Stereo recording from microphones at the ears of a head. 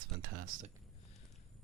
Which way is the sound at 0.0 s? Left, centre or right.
Right.